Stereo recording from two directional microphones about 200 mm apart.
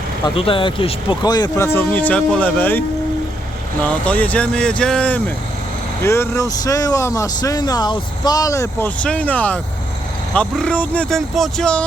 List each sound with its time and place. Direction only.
0.3 s speech: 25° left (ahead or behind); by 2.8 s 10° left (ahead or behind)
3.8 s speech: 5° left (ahead or behind)